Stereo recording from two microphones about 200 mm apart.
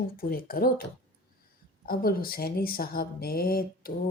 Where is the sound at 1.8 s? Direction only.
50° left (ahead or behind).